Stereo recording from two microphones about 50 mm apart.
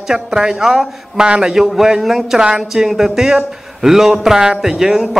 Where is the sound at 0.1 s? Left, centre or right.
Centre.